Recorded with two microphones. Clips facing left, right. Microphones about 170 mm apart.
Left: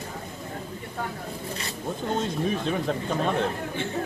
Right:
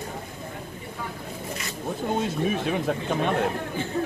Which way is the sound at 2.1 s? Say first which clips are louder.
Right 1 dB; 10° right (ahead or behind).